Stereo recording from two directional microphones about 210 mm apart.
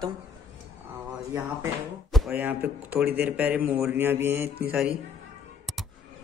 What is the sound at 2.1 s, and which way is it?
Speech, 5° right (ahead or behind).